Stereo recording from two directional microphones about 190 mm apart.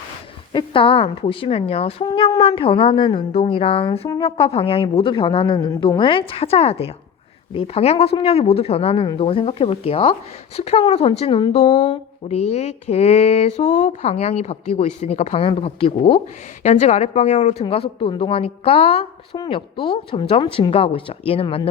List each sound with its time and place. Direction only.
0.5 s a woman's voice: 30° left (ahead or behind)
12.2 s a woman's voice: 35° left (ahead or behind)